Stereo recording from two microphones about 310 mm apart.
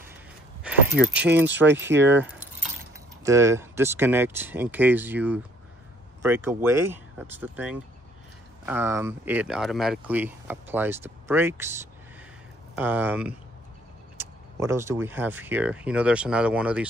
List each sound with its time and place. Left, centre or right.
0.7 s keys jangling: centre
1.0 s speech: centre
1.8 s speech: right
3.3 s speech: centre